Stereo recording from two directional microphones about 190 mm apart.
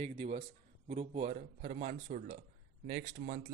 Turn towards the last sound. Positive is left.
turn(degrees=-45)  # may be behind; listen again after turning